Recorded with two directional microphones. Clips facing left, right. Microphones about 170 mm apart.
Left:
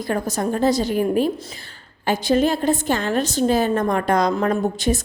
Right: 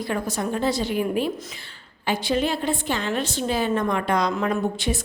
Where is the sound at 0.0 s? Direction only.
45° left (ahead or behind).